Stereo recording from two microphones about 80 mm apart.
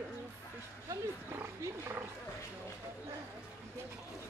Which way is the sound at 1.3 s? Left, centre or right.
Right.